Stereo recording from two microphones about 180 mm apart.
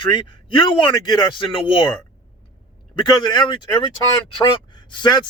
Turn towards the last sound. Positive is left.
turn(degrees=25)  # may be behind; listen again after turning